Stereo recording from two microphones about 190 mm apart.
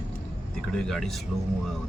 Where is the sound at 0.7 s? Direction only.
Centre (ahead or behind).